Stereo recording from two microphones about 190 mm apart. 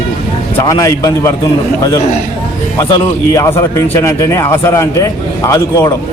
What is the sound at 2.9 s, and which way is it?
A man's voice, 15° left (ahead or behind).